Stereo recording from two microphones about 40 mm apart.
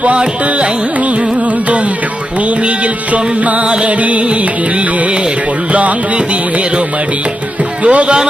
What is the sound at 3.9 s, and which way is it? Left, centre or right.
Carnatic music, right.